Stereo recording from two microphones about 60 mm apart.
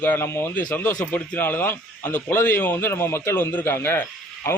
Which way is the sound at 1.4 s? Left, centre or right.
Left.